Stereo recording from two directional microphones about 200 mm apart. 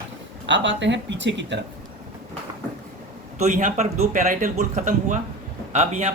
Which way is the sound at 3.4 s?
40° right (ahead or behind).